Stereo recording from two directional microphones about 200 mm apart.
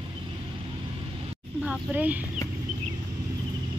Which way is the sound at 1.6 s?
5° right (ahead or behind).